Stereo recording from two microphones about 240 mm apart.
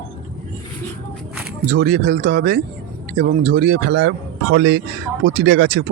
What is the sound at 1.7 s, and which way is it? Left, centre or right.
Speech, right.